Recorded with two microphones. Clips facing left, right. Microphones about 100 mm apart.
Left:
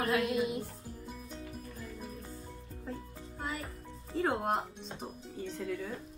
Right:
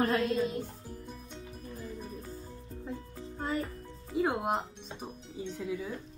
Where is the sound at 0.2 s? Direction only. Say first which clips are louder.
Right 1 dB; 15° left (ahead or behind).